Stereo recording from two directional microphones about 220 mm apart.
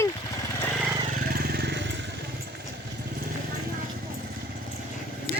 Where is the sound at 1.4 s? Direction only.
45° right (ahead or behind).